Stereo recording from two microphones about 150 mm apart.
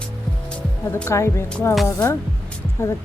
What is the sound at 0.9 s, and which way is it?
Speech, 20° left (ahead or behind).